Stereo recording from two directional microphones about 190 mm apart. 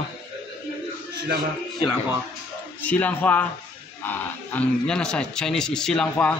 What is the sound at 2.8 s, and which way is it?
Speech, 10° left (ahead or behind).